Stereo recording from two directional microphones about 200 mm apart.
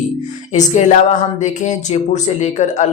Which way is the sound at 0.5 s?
35° left (ahead or behind).